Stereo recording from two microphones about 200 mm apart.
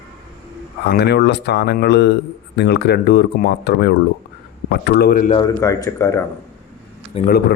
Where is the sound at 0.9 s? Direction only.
55° left (ahead or behind).